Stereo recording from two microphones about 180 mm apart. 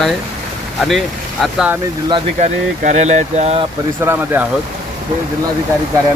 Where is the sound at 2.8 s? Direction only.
40° right (ahead or behind).